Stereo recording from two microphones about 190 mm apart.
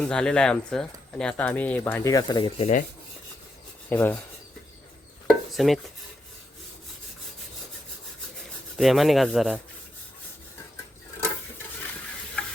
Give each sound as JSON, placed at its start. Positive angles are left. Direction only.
{"t": 0.0, "sound": "speech", "side_deg": 5}
{"t": 2.6, "sound": "rub", "side_deg": 35}
{"t": 3.8, "sound": "speech", "side_deg": 10}
{"t": 5.3, "sound": "dishes", "side_deg": 0}
{"t": 8.7, "sound": "speech", "side_deg": 0}